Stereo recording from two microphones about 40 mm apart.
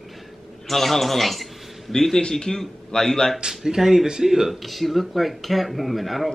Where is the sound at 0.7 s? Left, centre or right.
Centre.